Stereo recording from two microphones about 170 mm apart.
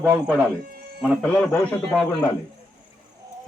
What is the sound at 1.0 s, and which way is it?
A man's voice, 5° left (ahead or behind).